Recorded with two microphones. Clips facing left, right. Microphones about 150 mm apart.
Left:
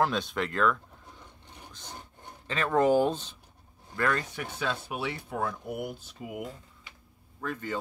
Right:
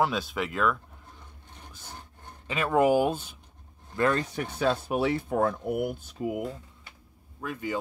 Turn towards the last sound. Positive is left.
turn(degrees=-10)  # may be behind; listen again after turning